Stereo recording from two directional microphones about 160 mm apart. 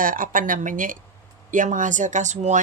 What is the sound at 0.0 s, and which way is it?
Speech, 60° right (ahead or behind).